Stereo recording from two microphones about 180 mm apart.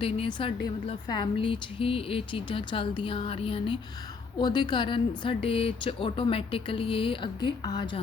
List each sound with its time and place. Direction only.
0.0 s a woman's voice: 30° left (ahead or behind)